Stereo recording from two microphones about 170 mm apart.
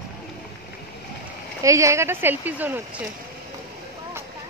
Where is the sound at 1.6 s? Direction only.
20° right (ahead or behind).